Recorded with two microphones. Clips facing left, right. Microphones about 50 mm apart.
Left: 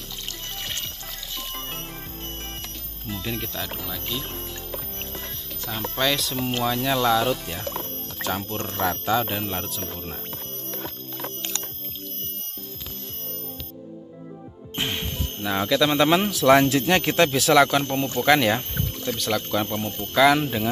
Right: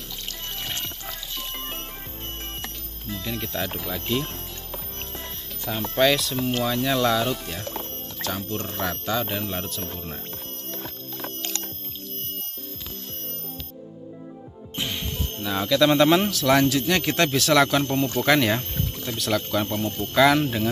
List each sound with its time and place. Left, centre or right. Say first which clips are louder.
0.6 s music: right 1 dB; centre
3.1 s speech: left 1 dB; centre
3.5 s speech: right 3 dB; centre
5.7 s speech: right 4 dB; centre
8.2 s speech: left 2 dB; centre
8.6 s speech: left 6 dB; centre
10.8 s music: left 2 dB; centre
14.8 s music: left 2 dB; left
15.4 s speech: left 1 dB; centre
15.8 s a man's voice: right 3 dB; centre; by 17.1 s left
17.1 s speech: left 2 dB; centre